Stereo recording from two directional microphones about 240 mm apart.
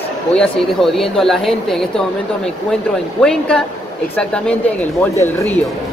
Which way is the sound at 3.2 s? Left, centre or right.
Centre.